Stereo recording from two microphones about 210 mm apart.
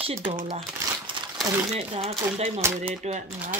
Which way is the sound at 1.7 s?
30° right (ahead or behind).